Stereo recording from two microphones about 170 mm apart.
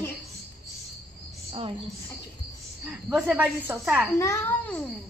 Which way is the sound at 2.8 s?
5° right (ahead or behind).